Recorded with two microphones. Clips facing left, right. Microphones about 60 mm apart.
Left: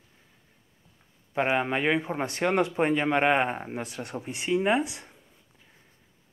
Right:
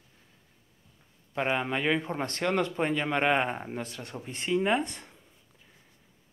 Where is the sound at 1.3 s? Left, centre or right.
Centre.